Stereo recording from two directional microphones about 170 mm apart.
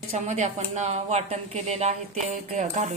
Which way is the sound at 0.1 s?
40° right (ahead or behind).